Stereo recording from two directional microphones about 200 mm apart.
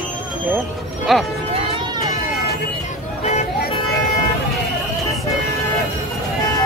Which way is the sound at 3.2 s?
35° left (ahead or behind).